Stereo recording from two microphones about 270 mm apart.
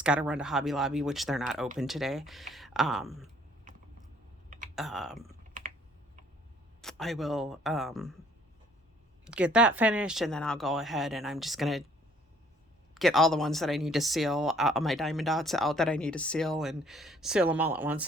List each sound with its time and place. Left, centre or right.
0.0 s speech: centre
4.4 s typing: right
4.7 s speech: centre
5.4 s typing: right
6.8 s speech: centre
9.2 s speech: centre
12.9 s speech: centre